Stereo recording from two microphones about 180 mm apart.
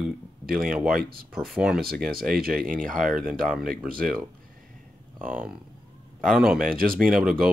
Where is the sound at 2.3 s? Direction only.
55° right (ahead or behind).